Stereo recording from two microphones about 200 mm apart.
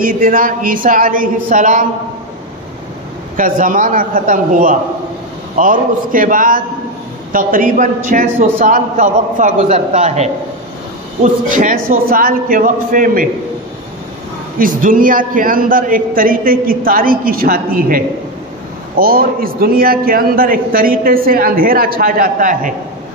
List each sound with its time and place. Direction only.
0.0 s a man's voice: 45° right (ahead or behind)
3.3 s a man's voice: 40° right (ahead or behind)
11.5 s a man's voice: 45° right (ahead or behind)
14.6 s a man's voice: 45° right (ahead or behind)